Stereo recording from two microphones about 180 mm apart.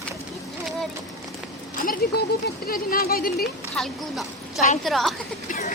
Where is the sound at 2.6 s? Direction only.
55° left (ahead or behind).